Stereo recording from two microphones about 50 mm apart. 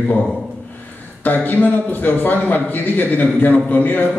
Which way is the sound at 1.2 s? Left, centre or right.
Left.